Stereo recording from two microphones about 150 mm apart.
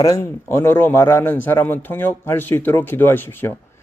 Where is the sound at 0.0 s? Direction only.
20° left (ahead or behind).